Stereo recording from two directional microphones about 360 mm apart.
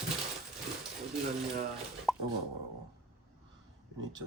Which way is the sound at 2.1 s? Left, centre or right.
Centre.